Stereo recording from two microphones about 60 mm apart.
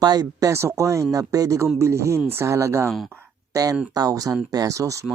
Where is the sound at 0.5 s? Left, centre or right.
Right.